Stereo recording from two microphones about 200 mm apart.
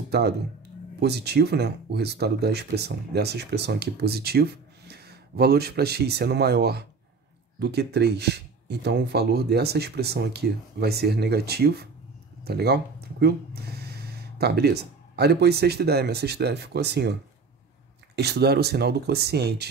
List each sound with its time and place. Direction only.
0.1 s speech: 55° right (ahead or behind)